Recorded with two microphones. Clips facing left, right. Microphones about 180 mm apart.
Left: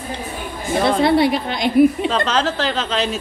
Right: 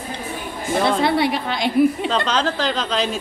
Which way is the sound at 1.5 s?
20° left (ahead or behind).